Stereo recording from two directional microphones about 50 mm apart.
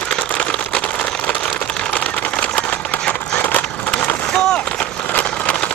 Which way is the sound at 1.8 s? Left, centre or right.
Left.